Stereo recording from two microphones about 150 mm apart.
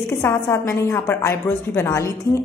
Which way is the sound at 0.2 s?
15° left (ahead or behind).